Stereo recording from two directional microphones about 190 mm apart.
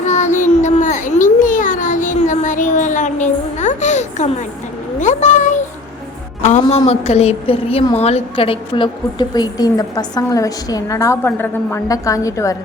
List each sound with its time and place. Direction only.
0.0 s child singing: 40° left (ahead or behind)
0.6 s a sound: 40° left (ahead or behind)
6.4 s a woman's voice: 35° left (ahead or behind); by 12.5 s 15° left (ahead or behind)